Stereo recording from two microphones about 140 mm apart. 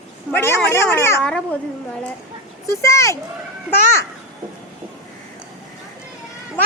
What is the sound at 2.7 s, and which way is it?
Speech, 20° left (ahead or behind).